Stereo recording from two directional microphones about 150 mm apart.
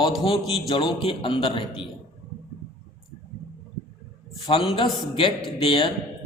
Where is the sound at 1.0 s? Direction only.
35° left (ahead or behind).